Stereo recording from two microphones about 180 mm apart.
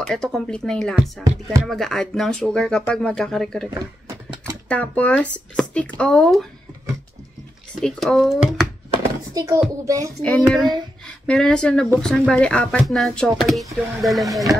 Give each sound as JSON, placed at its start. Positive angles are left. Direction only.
{"t": 0.0, "sound": "speech", "side_deg": 5}
{"t": 4.1, "sound": "a sound", "side_deg": -15}
{"t": 4.6, "sound": "speech", "side_deg": 5}
{"t": 7.8, "sound": "speech", "side_deg": 5}
{"t": 9.3, "sound": "a child's voice", "side_deg": -15}
{"t": 10.2, "sound": "speech", "side_deg": 5}